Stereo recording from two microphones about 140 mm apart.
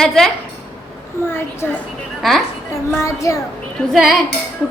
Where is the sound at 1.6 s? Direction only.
15° left (ahead or behind).